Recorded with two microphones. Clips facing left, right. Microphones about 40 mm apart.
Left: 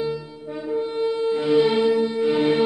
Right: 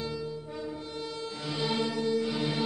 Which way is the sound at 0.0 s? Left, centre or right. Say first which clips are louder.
Left 8 dB; centre.